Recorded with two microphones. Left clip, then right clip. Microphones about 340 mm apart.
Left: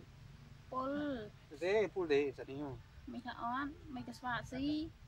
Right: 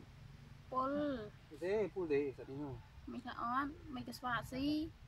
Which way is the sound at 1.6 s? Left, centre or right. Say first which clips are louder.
Left 3 dB; left.